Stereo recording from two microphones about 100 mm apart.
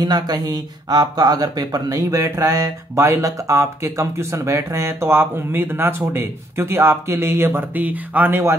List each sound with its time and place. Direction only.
0.0 s speech: 40° right (ahead or behind); by 8.5 s 20° right (ahead or behind)